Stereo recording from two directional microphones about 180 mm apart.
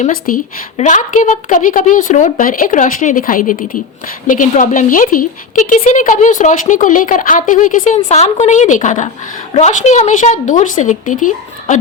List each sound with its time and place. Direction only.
0.0 s a woman's voice: 50° left (ahead or behind)